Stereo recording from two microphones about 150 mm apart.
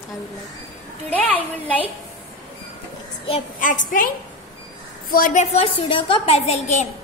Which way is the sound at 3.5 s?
60° left (ahead or behind).